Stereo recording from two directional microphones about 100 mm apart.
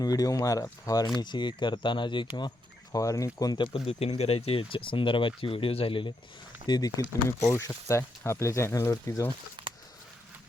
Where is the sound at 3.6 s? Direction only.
70° left (ahead or behind).